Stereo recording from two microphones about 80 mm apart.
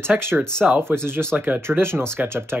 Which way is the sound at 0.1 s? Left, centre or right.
Right.